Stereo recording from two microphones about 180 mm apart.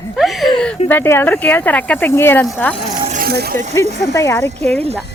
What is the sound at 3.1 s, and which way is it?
Vehicle, 55° right (ahead or behind).